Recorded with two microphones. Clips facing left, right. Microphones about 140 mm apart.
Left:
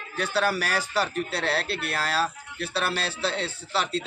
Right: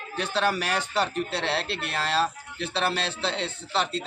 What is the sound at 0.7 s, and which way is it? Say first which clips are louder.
Speech: even; 20° right (ahead or behind).